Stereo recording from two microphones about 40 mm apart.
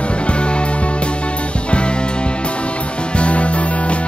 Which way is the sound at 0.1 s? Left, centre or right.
Left.